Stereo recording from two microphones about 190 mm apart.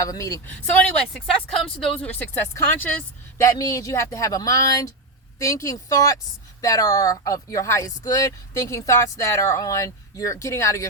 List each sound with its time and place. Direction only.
0.0 s speech: 15° left (ahead or behind)
1.1 s speech: centre (ahead or behind)